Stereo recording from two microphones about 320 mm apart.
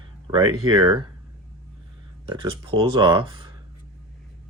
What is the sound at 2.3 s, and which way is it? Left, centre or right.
Speech, centre.